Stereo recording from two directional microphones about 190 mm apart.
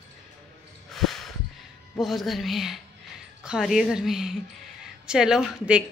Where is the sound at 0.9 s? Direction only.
Centre (ahead or behind).